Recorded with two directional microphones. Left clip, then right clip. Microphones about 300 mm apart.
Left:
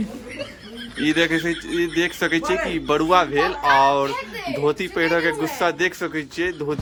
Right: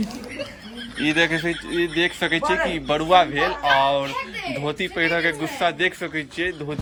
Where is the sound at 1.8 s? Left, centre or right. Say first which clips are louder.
Even; centre.